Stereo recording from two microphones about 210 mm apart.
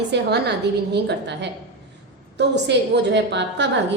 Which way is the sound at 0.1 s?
50° right (ahead or behind).